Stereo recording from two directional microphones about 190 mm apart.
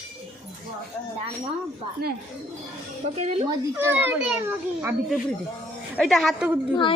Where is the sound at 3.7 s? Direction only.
10° right (ahead or behind).